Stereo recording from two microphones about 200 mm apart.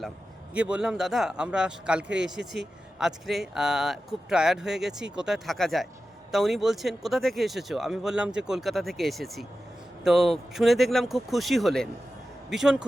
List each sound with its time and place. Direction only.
0.5 s speech: 5° right (ahead or behind)